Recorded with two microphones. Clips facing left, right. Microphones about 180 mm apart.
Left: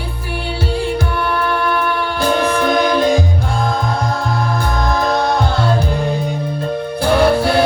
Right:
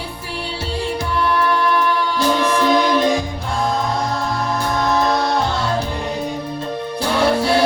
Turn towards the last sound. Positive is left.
turn(degrees=55)  # may be behind; listen again after turning